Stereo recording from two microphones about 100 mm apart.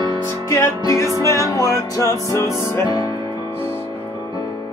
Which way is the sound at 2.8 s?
45° left (ahead or behind).